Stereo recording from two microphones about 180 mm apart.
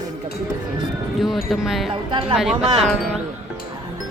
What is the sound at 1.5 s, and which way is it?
Speech, centre (ahead or behind).